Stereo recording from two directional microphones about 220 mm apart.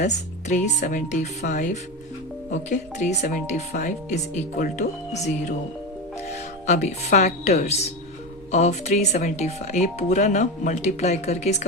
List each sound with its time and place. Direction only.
0.0 s speech: 30° left (ahead or behind)